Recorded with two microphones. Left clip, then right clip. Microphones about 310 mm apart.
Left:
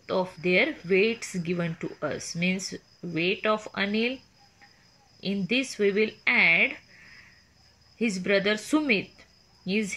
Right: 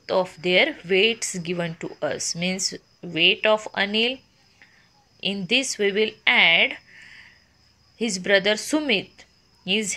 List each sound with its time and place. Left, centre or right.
0.0 s speech: right
5.2 s speech: right
8.0 s speech: centre